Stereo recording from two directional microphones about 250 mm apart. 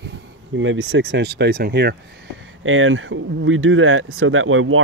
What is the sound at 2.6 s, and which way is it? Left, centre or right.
Speech, right.